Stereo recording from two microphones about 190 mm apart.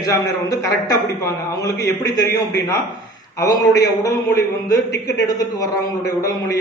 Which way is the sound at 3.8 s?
20° left (ahead or behind).